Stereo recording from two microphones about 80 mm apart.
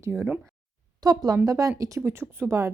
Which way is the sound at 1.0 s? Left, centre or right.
Right.